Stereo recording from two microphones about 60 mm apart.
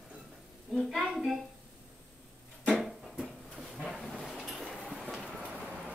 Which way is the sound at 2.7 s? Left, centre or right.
Centre.